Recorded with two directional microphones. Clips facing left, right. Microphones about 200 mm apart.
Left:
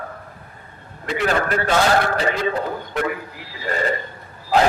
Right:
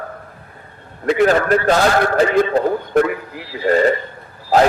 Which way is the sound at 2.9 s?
50° right (ahead or behind).